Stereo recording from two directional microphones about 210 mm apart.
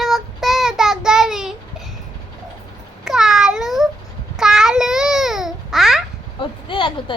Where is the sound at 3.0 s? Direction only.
Centre (ahead or behind).